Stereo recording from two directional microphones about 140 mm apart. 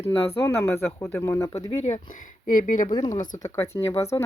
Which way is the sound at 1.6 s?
50° left (ahead or behind).